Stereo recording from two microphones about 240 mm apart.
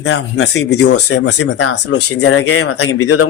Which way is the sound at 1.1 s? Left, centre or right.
Left.